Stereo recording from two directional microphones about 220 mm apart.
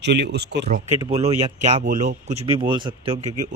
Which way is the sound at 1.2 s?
30° right (ahead or behind).